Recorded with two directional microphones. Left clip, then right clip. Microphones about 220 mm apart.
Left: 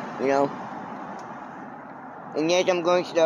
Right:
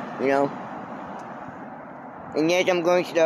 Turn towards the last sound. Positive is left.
turn(degrees=-15)  # may be behind; listen again after turning